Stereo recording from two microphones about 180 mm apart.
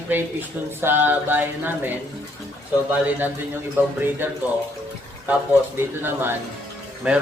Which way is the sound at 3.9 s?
10° right (ahead or behind).